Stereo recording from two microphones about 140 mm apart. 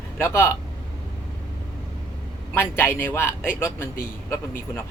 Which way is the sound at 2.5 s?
15° left (ahead or behind).